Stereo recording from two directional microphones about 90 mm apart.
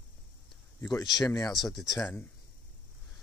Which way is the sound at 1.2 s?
45° left (ahead or behind).